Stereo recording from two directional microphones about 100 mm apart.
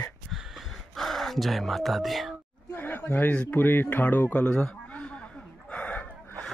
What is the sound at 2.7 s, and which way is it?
Speech, 20° left (ahead or behind).